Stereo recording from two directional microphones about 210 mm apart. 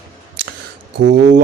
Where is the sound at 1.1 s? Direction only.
35° right (ahead or behind).